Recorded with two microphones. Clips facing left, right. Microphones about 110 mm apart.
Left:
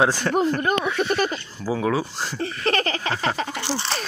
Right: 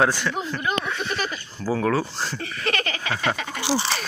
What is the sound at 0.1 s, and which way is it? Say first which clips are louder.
Speech: left 6 dB; 45° left (ahead or behind).